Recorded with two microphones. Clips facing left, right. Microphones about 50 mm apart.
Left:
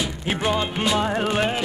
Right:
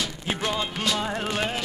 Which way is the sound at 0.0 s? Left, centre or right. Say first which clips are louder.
Left 4 dB; centre.